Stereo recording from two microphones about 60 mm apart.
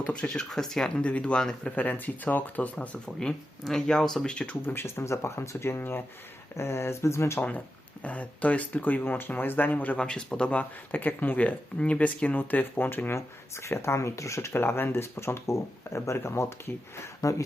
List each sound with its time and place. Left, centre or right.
0.0 s speech: centre
1.7 s speech: left
3.2 s speech: centre
4.6 s speech: left
8.0 s speech: left
10.0 s speech: centre; by 13.1 s left
13.1 s speech: left
14.5 s speech: left
17.2 s speech: left